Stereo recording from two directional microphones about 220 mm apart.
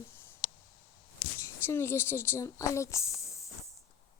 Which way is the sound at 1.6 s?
10° left (ahead or behind).